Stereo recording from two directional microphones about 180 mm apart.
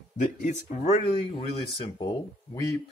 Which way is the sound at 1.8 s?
20° left (ahead or behind).